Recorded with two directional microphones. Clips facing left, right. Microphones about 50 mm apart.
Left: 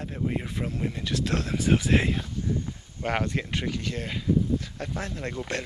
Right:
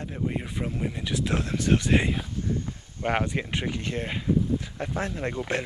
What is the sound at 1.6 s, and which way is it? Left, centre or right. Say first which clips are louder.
Speech: even; centre.